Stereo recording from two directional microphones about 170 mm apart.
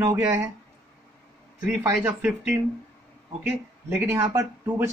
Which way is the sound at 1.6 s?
10° right (ahead or behind).